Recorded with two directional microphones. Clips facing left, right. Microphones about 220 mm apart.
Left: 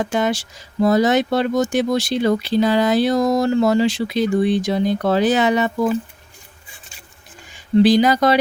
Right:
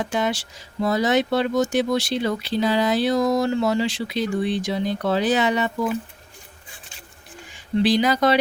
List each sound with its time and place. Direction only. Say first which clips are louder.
0.0 s speech: left 4 dB; 45° left (ahead or behind)
7.8 s speech: left 5 dB; 45° left (ahead or behind)